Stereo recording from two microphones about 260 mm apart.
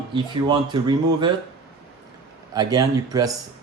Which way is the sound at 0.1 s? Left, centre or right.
Centre.